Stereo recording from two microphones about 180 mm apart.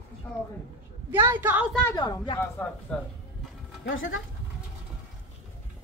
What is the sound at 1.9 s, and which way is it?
Speech, 20° left (ahead or behind).